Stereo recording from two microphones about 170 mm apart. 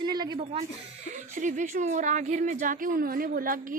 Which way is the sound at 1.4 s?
45° right (ahead or behind).